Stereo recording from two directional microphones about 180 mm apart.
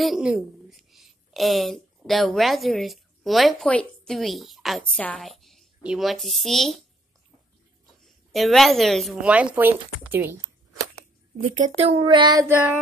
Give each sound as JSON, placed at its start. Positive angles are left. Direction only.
{"t": 0.0, "sound": "a woman's voice", "side_deg": 0}
{"t": 8.0, "sound": "speech", "side_deg": 0}
{"t": 11.4, "sound": "speech", "side_deg": -45}